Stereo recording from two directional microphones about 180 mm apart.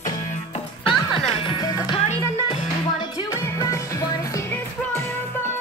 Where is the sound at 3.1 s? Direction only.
20° left (ahead or behind).